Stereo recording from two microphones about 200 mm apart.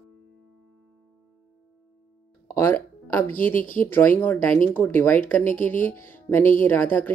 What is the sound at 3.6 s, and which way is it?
Speech, 40° left (ahead or behind).